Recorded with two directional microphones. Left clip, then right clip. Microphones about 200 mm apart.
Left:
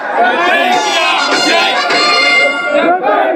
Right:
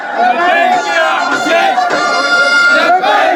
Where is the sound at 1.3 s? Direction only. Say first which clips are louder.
Even; 55° right (ahead or behind).